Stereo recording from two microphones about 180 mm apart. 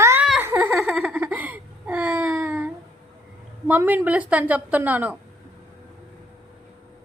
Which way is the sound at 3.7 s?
10° right (ahead or behind).